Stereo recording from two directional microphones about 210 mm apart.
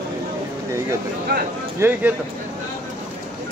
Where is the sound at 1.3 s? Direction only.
50° right (ahead or behind).